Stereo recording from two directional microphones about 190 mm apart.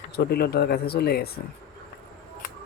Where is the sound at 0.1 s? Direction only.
55° left (ahead or behind).